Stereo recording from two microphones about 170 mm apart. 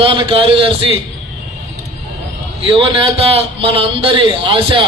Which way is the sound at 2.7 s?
35° right (ahead or behind).